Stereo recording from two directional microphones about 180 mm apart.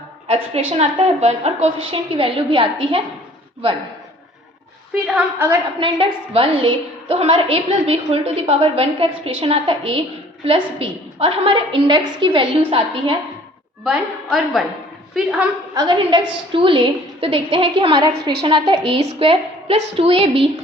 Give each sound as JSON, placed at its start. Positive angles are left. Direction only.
{"t": 0.3, "sound": "a woman's voice", "side_deg": -35}
{"t": 5.0, "sound": "a woman's voice", "side_deg": -10}
{"t": 5.8, "sound": "a woman's voice", "side_deg": -30}
{"t": 13.8, "sound": "a woman's voice", "side_deg": 0}
{"t": 15.7, "sound": "a woman's voice", "side_deg": -25}
{"t": 18.2, "sound": "a woman's voice", "side_deg": -65}
{"t": 18.4, "sound": "a woman's voice", "side_deg": -30}